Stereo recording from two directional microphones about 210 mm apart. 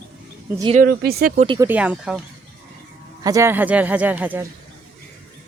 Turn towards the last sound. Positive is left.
turn(degrees=-10)  # may be behind; listen again after turning